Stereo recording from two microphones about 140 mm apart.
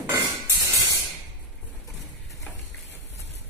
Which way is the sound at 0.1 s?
25° right (ahead or behind).